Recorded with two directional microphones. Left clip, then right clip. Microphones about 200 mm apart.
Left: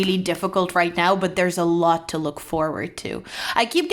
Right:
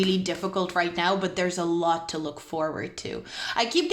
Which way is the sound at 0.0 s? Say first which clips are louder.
Left 4 dB; 30° left (ahead or behind).